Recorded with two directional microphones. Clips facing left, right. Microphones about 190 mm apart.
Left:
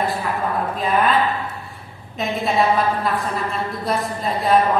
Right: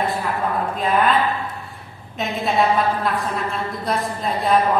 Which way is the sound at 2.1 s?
Centre (ahead or behind).